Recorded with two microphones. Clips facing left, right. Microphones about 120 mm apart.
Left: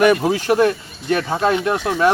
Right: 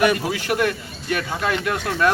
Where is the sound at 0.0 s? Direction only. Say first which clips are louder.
Left 5 dB; 45° left (ahead or behind).